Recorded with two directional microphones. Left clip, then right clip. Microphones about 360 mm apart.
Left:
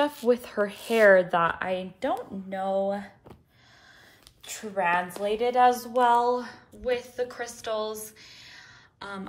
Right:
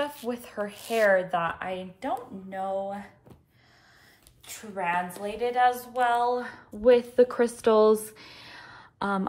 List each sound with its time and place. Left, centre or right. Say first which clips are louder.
0.0 s a woman's voice: left 7 dB; left
4.5 s a woman's voice: left 4 dB; left; by 9.3 s centre